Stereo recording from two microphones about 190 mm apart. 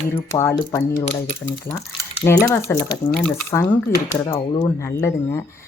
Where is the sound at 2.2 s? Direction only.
15° left (ahead or behind).